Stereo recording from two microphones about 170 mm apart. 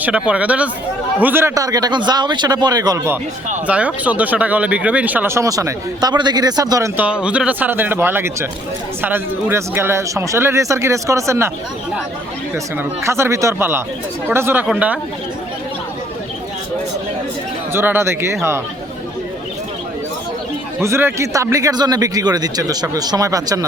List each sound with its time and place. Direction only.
0.0 s speech: 5° right (ahead or behind)
3.7 s speech: 10° right (ahead or behind)
13.1 s speech: 15° right (ahead or behind)
17.7 s speech: 15° right (ahead or behind)
20.8 s speech: 15° right (ahead or behind)